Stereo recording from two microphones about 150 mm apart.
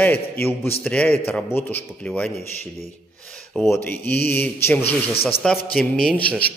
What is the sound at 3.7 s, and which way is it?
A man's voice, 15° left (ahead or behind).